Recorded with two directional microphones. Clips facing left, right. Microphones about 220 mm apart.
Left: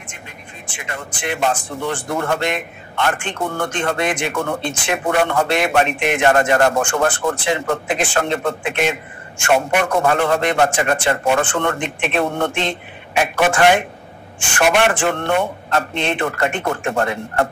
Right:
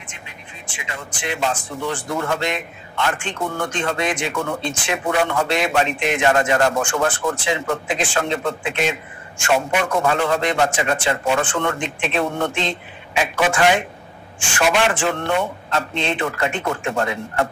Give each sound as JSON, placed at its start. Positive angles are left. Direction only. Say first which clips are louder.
{"t": 0.7, "sound": "speech", "louder": "left 3 dB", "side_deg": 55}